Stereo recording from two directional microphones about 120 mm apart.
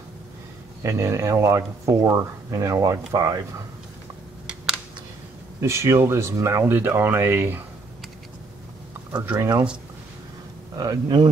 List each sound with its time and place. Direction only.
0.8 s speech: 25° right (ahead or behind)
5.6 s speech: 25° right (ahead or behind)
9.2 s speech: 20° right (ahead or behind)
10.8 s speech: 35° right (ahead or behind)